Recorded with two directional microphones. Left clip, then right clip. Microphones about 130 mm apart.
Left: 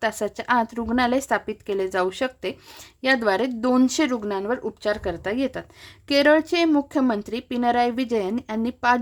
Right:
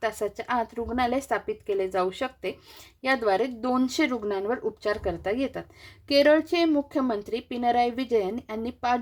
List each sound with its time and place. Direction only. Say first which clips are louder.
0.0 s a woman's voice: left 3 dB; 30° left (ahead or behind)